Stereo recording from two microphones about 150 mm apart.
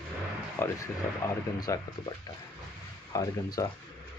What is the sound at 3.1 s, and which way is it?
Speech, 25° left (ahead or behind).